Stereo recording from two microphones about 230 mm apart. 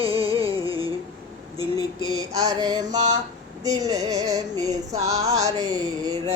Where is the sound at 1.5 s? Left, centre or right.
Centre.